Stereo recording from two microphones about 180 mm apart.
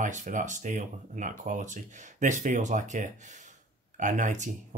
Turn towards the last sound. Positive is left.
turn(degrees=-45)  # may be behind; listen again after turning